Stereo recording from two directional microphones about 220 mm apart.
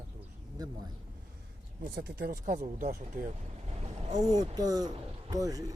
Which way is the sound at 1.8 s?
50° right (ahead or behind).